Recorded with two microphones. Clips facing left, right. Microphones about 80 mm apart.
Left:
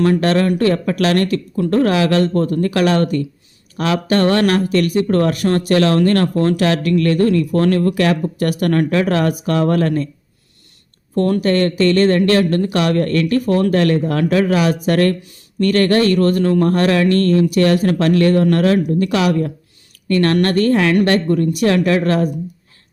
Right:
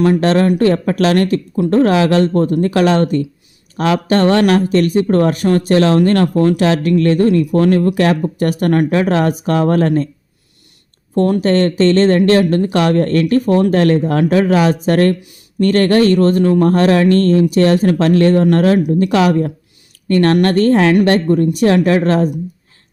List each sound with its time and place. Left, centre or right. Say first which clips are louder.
0.0 s speech: right 2 dB; right
7.9 s speech: right 2 dB; right
11.1 s speech: right 2 dB; right